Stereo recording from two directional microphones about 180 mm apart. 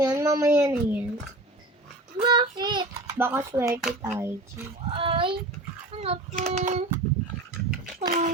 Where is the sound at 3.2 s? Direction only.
10° right (ahead or behind).